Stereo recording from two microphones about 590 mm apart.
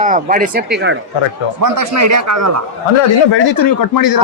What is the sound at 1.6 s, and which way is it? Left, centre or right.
Speech, right.